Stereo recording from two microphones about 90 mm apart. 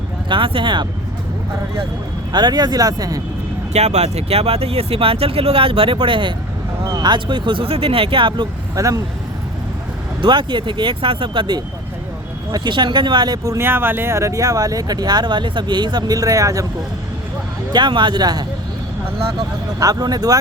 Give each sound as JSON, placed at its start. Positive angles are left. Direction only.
{"t": 0.3, "sound": "speech", "side_deg": -70}
{"t": 2.3, "sound": "speech", "side_deg": -50}
{"t": 4.3, "sound": "speech", "side_deg": -90}
{"t": 7.0, "sound": "speech", "side_deg": -55}
{"t": 8.7, "sound": "speech", "side_deg": -40}
{"t": 10.2, "sound": "speech", "side_deg": -60}
{"t": 13.7, "sound": "speech", "side_deg": -25}
{"t": 17.7, "sound": "speech", "side_deg": -55}
{"t": 19.8, "sound": "speech", "side_deg": -45}